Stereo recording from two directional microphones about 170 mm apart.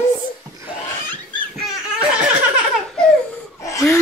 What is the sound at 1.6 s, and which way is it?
Laughter, 5° right (ahead or behind).